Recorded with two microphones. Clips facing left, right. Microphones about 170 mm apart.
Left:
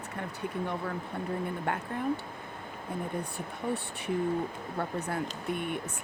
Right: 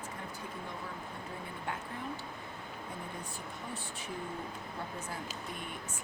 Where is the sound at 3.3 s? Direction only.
60° left (ahead or behind).